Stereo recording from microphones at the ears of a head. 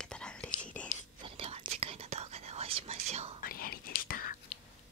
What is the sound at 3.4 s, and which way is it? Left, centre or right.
Whispering, left.